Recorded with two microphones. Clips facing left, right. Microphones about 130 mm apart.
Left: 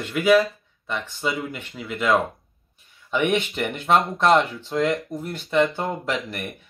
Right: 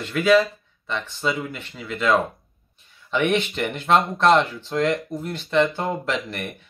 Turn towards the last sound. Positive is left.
turn(degrees=5)  # may be behind; listen again after turning